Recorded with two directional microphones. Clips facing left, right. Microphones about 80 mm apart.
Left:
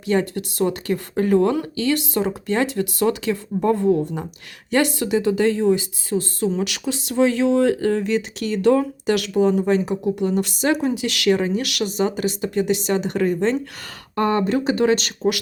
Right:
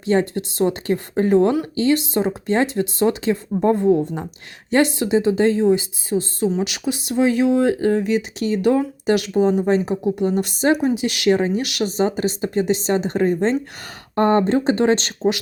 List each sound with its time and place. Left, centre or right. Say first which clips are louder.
0.0 s speech: right 2 dB; right
14.2 s speech: right 3 dB; right